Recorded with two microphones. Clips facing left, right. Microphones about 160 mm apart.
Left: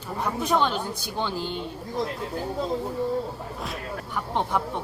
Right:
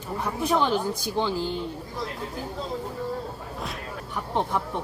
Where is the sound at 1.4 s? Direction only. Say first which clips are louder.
Right 2 dB; 20° left (ahead or behind).